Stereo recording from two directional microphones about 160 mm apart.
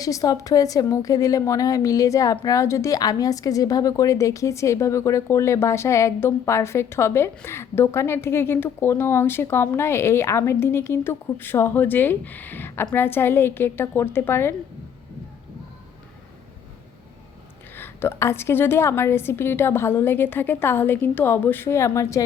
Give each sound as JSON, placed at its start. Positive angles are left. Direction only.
{"t": 0.0, "sound": "a woman's voice", "side_deg": 20}
{"t": 17.7, "sound": "a woman's voice", "side_deg": 15}